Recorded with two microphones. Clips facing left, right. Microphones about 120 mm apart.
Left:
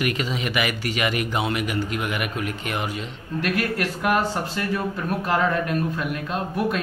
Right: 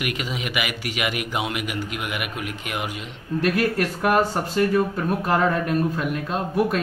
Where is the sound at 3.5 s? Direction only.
30° right (ahead or behind).